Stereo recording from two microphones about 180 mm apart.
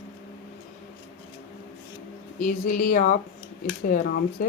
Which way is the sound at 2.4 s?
50° left (ahead or behind).